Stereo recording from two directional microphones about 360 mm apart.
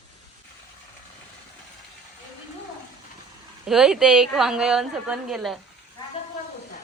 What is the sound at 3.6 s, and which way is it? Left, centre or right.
A woman's voice, centre.